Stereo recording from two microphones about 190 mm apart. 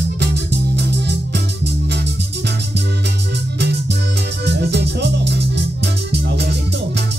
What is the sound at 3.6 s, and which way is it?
Music, 60° right (ahead or behind).